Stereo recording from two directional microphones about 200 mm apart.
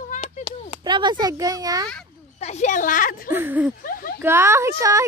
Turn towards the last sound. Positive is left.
turn(degrees=-15)  # may be behind; listen again after turning